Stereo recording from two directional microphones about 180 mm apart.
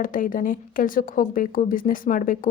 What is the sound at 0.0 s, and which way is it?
A woman's voice, 50° left (ahead or behind).